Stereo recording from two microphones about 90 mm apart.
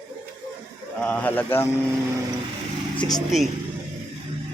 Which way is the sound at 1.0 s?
20° left (ahead or behind).